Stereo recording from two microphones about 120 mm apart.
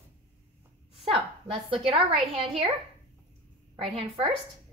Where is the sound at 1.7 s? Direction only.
50° right (ahead or behind).